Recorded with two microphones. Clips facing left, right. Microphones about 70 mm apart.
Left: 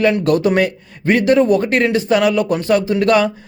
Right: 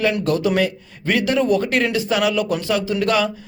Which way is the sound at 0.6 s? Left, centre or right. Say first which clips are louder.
Left 5 dB; left.